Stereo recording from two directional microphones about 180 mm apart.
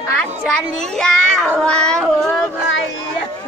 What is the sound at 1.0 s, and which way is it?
A woman's voice, 5° left (ahead or behind).